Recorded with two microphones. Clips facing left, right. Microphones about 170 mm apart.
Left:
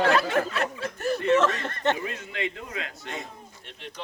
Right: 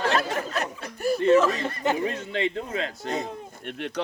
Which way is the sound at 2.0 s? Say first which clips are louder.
Right 5 dB; 30° right (ahead or behind).